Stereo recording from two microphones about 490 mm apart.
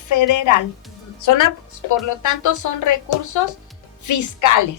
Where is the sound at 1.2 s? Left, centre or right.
Left.